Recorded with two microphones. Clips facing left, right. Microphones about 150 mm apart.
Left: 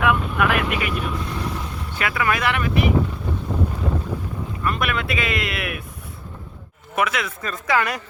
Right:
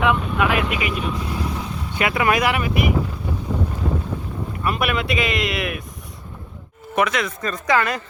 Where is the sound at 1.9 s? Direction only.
20° right (ahead or behind).